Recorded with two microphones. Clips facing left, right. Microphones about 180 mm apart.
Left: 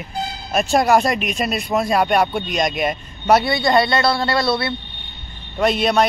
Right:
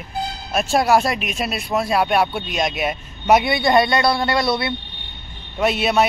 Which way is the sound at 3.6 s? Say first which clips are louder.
Even; 20° right (ahead or behind).